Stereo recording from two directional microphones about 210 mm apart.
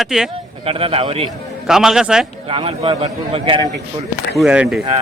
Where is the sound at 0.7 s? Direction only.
25° right (ahead or behind).